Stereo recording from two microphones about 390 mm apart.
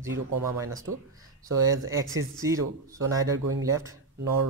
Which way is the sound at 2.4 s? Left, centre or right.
Centre.